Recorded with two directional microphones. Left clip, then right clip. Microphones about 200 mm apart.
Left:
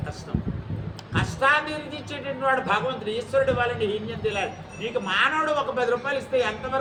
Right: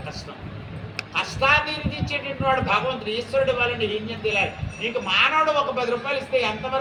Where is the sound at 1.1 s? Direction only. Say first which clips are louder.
Right 1 dB; 15° left (ahead or behind).